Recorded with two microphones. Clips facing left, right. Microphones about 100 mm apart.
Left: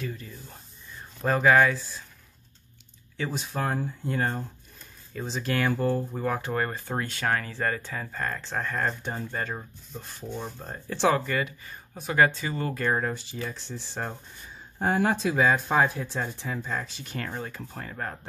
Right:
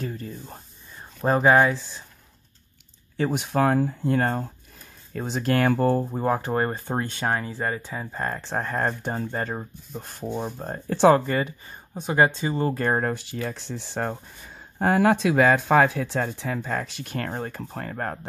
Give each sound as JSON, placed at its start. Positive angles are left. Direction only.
{"t": 0.0, "sound": "spray", "side_deg": -40}
{"t": 1.2, "sound": "speech", "side_deg": -30}
{"t": 3.2, "sound": "speech", "side_deg": -55}
{"t": 4.0, "sound": "speech", "side_deg": -55}
{"t": 6.1, "sound": "speech", "side_deg": -30}
{"t": 8.1, "sound": "speech", "side_deg": -30}
{"t": 10.0, "sound": "speech", "side_deg": -55}
{"t": 12.8, "sound": "speech", "side_deg": -45}
{"t": 13.1, "sound": "speech", "side_deg": -60}
{"t": 14.8, "sound": "speech", "side_deg": -75}